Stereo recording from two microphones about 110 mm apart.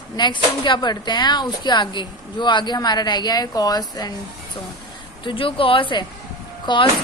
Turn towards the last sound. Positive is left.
turn(degrees=45)  # may be behind; listen again after turning